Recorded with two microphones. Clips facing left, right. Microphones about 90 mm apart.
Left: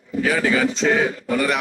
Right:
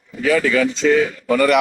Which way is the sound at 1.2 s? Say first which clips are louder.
Right 6 dB; 65° right (ahead or behind).